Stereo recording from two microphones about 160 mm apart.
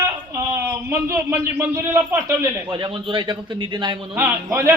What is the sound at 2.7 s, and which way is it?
A man's voice, 30° right (ahead or behind).